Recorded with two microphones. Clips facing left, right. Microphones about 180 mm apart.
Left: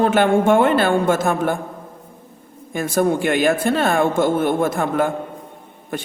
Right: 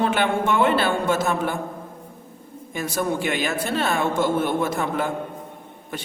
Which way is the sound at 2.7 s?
50° left (ahead or behind).